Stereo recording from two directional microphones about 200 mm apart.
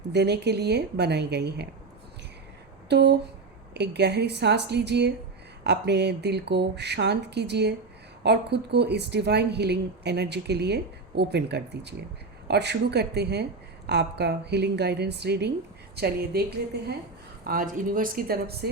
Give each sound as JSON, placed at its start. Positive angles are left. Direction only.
{"t": 0.1, "sound": "speech", "side_deg": -55}
{"t": 2.9, "sound": "a woman's voice", "side_deg": -55}